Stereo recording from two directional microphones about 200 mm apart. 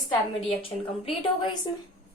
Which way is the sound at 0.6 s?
25° left (ahead or behind).